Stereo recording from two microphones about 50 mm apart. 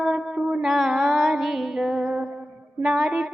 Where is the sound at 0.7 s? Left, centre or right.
Centre.